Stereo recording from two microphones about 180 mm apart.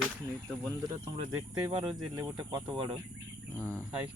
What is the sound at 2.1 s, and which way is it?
Speech, 25° right (ahead or behind).